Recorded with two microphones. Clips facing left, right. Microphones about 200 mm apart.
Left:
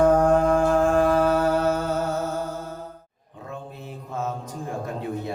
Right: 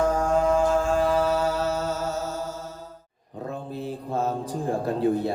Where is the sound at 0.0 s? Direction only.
55° left (ahead or behind).